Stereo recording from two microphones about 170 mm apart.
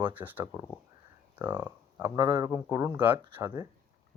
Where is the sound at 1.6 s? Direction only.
15° right (ahead or behind).